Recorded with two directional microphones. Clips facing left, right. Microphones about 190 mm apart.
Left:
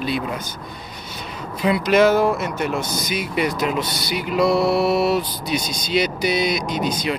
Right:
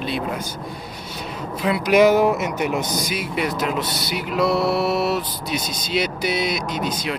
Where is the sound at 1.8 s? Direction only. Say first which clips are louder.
Right 1 dB; 15° right (ahead or behind).